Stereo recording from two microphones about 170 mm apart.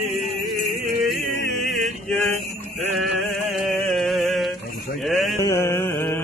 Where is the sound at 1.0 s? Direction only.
Centre (ahead or behind).